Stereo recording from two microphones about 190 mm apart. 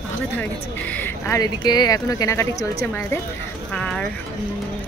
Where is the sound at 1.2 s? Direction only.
20° left (ahead or behind); by 4.0 s 5° left (ahead or behind).